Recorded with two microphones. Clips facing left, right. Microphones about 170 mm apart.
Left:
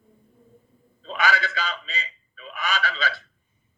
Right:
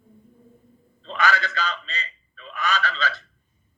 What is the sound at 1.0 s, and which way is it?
Fowl, 10° left (ahead or behind).